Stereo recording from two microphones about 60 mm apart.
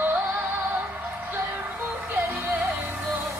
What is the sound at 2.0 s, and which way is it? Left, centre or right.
Music, right.